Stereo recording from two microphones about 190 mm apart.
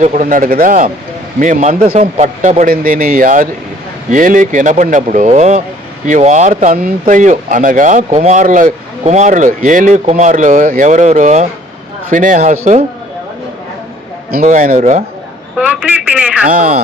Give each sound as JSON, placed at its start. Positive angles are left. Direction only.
{"t": 0.0, "sound": "speech", "side_deg": -40}
{"t": 14.3, "sound": "speech", "side_deg": -45}
{"t": 15.5, "sound": "speech", "side_deg": -5}
{"t": 16.5, "sound": "speech", "side_deg": -50}